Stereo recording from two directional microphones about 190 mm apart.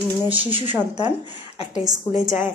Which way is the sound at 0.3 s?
25° right (ahead or behind).